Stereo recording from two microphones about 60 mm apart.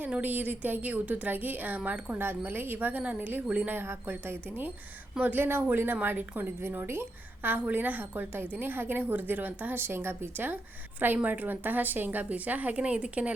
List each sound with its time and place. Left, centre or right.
0.2 s a woman's voice: right
3.7 s a woman's voice: right